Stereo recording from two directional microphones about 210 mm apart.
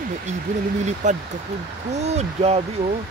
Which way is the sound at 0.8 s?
35° right (ahead or behind).